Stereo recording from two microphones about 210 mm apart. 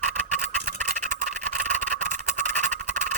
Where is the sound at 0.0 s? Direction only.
40° right (ahead or behind).